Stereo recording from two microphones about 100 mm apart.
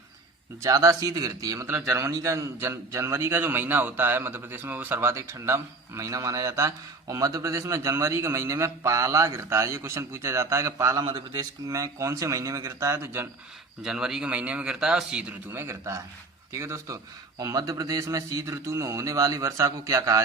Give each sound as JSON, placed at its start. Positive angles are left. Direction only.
{"t": 0.6, "sound": "a man's voice", "side_deg": -30}
{"t": 13.8, "sound": "a man's voice", "side_deg": -5}
{"t": 15.5, "sound": "a man's voice", "side_deg": -25}